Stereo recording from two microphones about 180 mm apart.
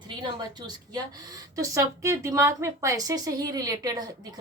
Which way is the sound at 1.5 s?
15° right (ahead or behind).